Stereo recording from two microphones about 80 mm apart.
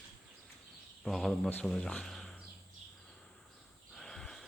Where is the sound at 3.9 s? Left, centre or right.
Centre.